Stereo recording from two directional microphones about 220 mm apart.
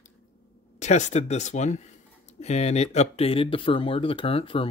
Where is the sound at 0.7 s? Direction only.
35° left (ahead or behind).